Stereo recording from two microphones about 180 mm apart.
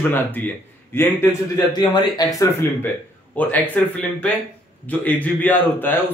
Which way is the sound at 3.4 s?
10° left (ahead or behind).